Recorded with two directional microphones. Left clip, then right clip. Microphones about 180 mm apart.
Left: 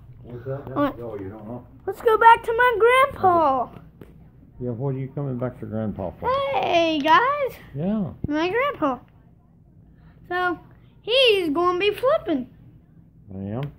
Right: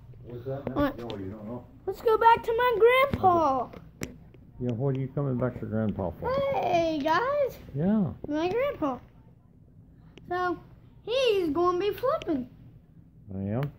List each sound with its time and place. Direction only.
0.3 s speech: centre (ahead or behind)
1.9 s a child's voice: 5° left (ahead or behind)
4.6 s speech: 25° right (ahead or behind)
6.2 s a child's voice: 15° left (ahead or behind)
7.7 s speech: 25° right (ahead or behind)
8.3 s a child's voice: 10° left (ahead or behind)
10.2 s a woman's voice: 5° left (ahead or behind)
13.3 s speech: 20° right (ahead or behind)